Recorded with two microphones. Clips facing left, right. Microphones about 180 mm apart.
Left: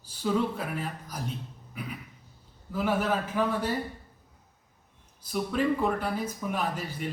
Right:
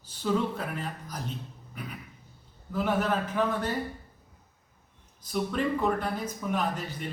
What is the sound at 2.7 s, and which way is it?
Speech, 10° left (ahead or behind).